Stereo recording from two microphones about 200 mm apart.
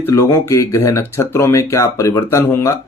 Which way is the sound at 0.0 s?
15° left (ahead or behind).